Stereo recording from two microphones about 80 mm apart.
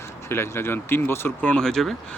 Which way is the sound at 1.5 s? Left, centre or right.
Centre.